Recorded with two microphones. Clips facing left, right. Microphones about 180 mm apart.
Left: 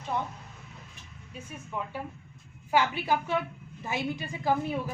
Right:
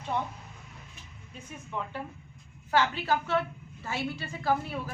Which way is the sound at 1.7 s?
10° left (ahead or behind).